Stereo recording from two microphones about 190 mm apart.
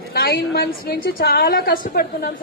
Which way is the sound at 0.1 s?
55° left (ahead or behind).